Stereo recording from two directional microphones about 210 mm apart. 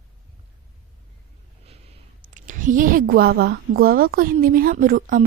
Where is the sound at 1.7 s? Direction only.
30° right (ahead or behind).